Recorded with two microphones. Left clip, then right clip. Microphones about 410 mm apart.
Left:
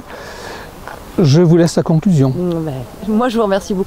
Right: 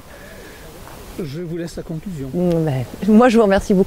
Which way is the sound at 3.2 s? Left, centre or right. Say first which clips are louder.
Right 1 dB; right.